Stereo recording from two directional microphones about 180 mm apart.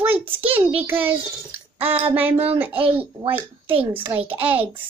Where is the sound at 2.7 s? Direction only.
30° right (ahead or behind).